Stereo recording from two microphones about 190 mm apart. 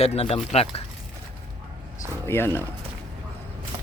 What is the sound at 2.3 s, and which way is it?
Speech, 10° left (ahead or behind).